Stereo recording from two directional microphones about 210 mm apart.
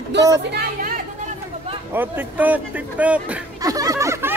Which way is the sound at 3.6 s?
15° right (ahead or behind).